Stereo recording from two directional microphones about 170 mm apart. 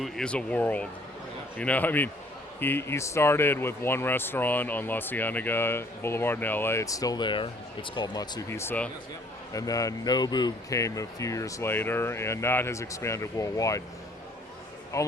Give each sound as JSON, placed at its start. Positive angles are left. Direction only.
{"t": 0.0, "sound": "speech", "side_deg": 5}
{"t": 14.9, "sound": "speech", "side_deg": 20}